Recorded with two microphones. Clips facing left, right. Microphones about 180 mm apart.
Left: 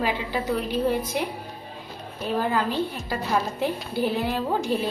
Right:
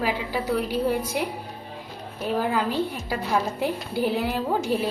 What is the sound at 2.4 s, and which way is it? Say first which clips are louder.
A woman's voice: even; 10° right (ahead or behind).